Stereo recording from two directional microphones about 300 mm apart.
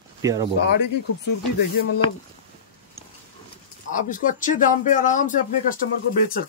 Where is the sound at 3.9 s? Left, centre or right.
Left.